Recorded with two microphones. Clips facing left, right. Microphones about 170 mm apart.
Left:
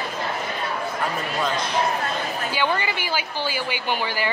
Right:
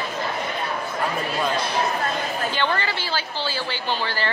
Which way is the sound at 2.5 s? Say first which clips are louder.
Left 2 dB; 10° left (ahead or behind).